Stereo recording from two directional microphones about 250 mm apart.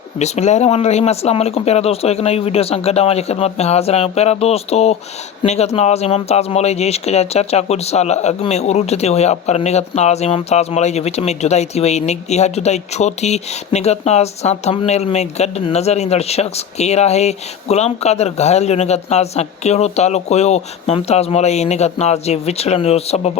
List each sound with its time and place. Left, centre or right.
0.2 s speech: left